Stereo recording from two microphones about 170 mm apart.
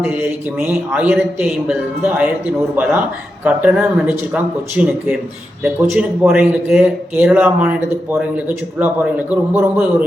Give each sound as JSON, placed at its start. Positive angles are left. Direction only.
{"t": 0.0, "sound": "speech", "side_deg": -10}
{"t": 3.4, "sound": "speech", "side_deg": -5}